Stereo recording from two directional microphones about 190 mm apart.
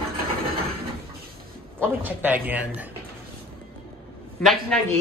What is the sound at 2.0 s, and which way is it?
Speech, 10° right (ahead or behind).